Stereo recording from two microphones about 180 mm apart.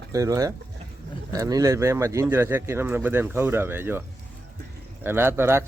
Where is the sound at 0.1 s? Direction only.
20° right (ahead or behind).